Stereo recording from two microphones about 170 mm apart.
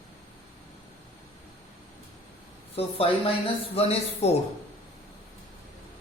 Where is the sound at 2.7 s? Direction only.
35° left (ahead or behind).